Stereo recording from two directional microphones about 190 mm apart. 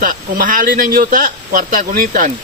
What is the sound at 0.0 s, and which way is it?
Speech, 45° right (ahead or behind).